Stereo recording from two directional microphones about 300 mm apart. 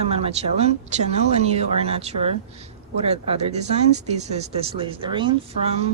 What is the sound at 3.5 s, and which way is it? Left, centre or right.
Speech, right.